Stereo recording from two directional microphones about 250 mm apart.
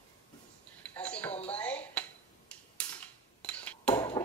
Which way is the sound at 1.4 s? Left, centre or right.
Centre.